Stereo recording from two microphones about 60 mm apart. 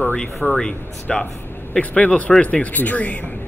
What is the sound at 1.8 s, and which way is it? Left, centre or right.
Speech, left.